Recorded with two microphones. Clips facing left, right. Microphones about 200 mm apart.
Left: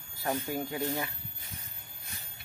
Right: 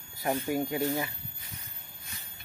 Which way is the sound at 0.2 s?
15° right (ahead or behind).